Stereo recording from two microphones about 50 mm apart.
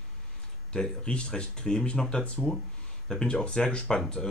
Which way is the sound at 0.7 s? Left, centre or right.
Centre.